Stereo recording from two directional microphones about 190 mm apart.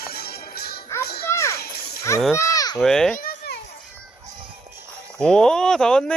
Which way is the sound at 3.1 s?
50° left (ahead or behind).